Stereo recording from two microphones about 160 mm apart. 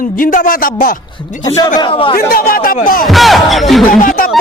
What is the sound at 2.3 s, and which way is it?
Speech, 65° left (ahead or behind).